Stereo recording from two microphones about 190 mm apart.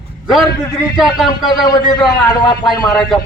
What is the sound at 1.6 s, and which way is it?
Speech, 20° left (ahead or behind).